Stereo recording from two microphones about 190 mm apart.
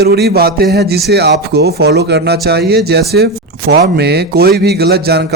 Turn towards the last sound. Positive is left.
turn(degrees=-60)  # may be behind; listen again after turning